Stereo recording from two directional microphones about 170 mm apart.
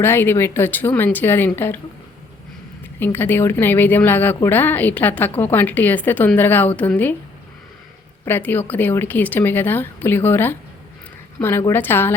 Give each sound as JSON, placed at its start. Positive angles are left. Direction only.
{"t": 0.0, "sound": "a woman's voice", "side_deg": 15}
{"t": 3.0, "sound": "a woman's voice", "side_deg": 10}
{"t": 8.2, "sound": "a woman's voice", "side_deg": 10}